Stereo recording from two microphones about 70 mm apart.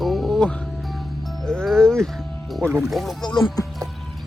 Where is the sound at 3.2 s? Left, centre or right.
Left.